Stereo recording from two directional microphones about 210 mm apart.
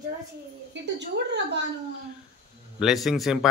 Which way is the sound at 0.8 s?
55° right (ahead or behind).